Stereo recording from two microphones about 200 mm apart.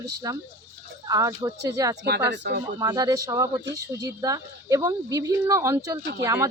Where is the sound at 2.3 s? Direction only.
55° right (ahead or behind).